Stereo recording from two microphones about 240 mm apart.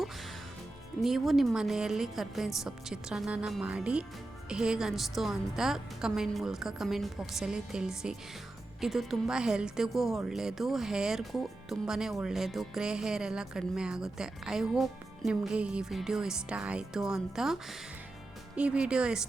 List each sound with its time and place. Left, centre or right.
1.0 s speech: centre